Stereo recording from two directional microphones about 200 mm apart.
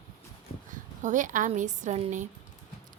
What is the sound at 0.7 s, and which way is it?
Speech, 40° right (ahead or behind).